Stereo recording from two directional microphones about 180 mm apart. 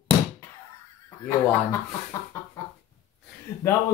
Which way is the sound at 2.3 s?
15° left (ahead or behind).